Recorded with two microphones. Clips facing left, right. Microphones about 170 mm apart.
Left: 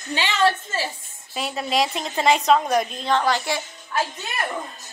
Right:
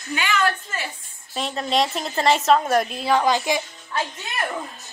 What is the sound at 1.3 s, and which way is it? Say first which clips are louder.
A woman's voice: right 1 dB; 5° left (ahead or behind).